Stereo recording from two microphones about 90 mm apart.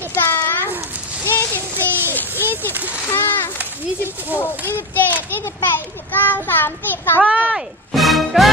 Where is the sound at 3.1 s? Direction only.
25° left (ahead or behind).